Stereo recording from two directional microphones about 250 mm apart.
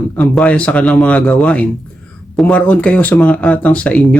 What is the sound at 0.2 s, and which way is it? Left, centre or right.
Speech, centre.